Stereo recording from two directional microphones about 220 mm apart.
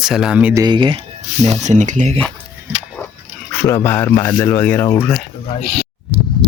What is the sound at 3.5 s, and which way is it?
Speech, 10° left (ahead or behind).